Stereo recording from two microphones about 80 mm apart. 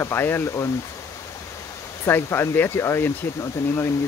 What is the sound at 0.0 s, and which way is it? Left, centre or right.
Speech, left.